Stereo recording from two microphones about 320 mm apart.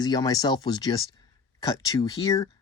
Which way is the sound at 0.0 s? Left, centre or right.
Centre.